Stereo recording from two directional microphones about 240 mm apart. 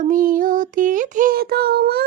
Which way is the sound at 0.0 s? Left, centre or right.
Right.